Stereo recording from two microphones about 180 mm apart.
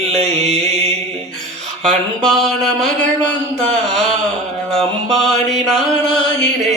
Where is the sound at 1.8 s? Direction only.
Centre (ahead or behind).